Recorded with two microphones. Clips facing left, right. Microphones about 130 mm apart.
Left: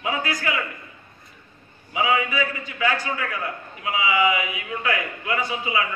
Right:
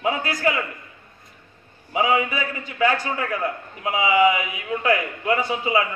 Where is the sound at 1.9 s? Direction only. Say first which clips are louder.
Right 2 dB; 40° right (ahead or behind).